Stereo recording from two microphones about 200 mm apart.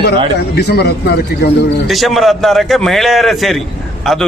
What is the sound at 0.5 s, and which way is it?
Speech, 55° left (ahead or behind).